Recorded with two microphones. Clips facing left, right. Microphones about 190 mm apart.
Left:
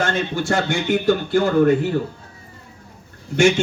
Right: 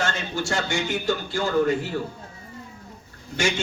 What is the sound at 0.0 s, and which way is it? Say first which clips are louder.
A man's voice: left 5 dB; 55° left (ahead or behind).